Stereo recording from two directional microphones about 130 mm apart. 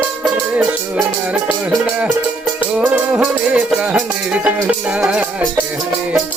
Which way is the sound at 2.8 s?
10° right (ahead or behind).